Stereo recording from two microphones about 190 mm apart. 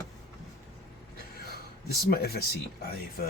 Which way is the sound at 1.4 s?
55° left (ahead or behind).